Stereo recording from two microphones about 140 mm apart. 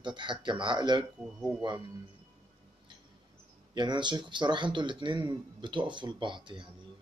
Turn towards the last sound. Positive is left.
turn(degrees=-35)  # may be behind; listen again after turning